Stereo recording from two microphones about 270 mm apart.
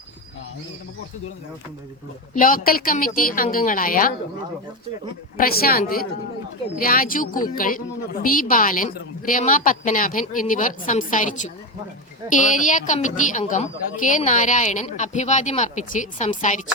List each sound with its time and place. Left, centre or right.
2.3 s a woman's voice: left
5.4 s a woman's voice: left